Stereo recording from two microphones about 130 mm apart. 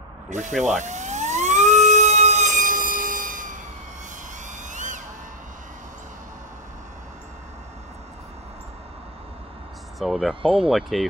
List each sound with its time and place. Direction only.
0.3 s emergency vehicle: 70° right (ahead or behind); by 3.5 s 90° right
4.5 s a sound: 75° right (ahead or behind)
9.9 s speech: centre (ahead or behind)